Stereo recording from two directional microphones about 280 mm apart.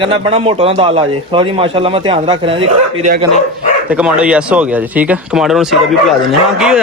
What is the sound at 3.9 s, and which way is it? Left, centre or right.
Speech, centre.